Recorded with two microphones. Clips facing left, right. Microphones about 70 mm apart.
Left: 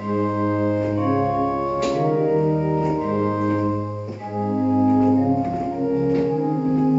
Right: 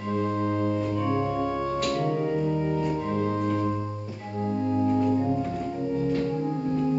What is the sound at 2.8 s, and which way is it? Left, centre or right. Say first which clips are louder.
Organ: left 6 dB; centre.